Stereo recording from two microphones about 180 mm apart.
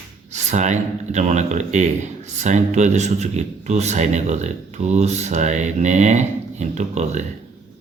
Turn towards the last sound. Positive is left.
turn(degrees=-40)  # may be behind; listen again after turning